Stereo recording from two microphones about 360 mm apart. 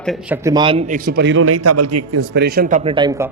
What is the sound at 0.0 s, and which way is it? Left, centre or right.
A man's voice, centre.